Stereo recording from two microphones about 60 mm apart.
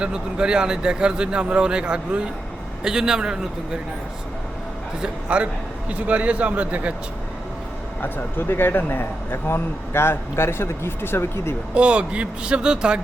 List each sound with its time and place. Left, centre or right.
0.0 s speech: centre
5.0 s speech: centre
8.0 s speech: left
11.7 s speech: centre